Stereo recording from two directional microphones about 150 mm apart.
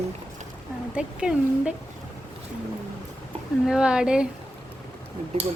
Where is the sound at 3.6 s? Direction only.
5° right (ahead or behind).